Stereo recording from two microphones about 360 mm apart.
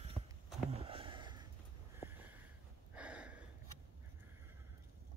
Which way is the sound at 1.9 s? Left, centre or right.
Centre.